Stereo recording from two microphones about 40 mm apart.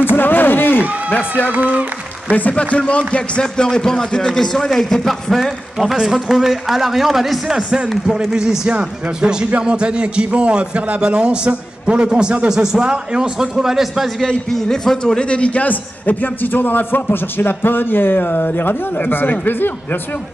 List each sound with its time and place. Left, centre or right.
0.1 s run: left
1.5 s speech: right
2.5 s speech: left; by 5.5 s centre
6.1 s a man's voice: centre
7.5 s a man's voice: centre
14.2 s a man's voice: centre; by 20.0 s left